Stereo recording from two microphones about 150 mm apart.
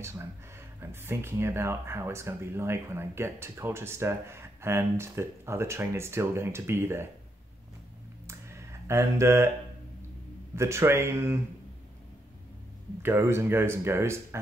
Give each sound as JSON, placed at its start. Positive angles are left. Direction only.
{"t": 0.0, "sound": "speech", "side_deg": -15}
{"t": 8.3, "sound": "a sound", "side_deg": -20}
{"t": 10.5, "sound": "speech", "side_deg": -20}
{"t": 13.0, "sound": "speech", "side_deg": -15}